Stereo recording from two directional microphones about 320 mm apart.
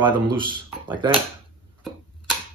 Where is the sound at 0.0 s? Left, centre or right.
Centre.